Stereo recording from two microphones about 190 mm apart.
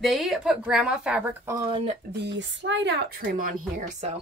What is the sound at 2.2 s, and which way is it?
Speech, 70° right (ahead or behind).